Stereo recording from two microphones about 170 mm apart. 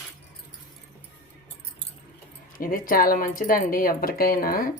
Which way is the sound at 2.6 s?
55° left (ahead or behind).